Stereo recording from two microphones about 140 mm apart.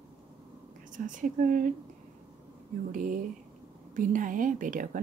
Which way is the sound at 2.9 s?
75° right (ahead or behind).